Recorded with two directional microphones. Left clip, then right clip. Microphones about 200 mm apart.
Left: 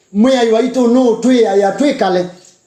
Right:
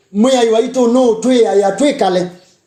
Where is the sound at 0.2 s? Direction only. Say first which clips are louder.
Even; 35° right (ahead or behind).